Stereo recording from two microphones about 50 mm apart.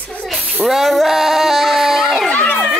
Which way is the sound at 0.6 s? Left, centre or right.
Centre.